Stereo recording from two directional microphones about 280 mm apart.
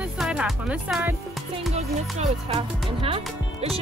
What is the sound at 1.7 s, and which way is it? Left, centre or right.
Speech, right.